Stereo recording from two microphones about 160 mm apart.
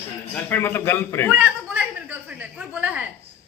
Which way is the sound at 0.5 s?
15° left (ahead or behind).